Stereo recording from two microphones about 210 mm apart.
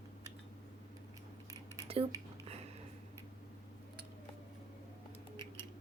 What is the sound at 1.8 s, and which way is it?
Cutlery, 25° right (ahead or behind).